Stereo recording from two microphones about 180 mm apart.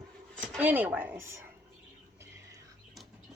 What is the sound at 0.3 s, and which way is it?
A woman's voice, 5° right (ahead or behind).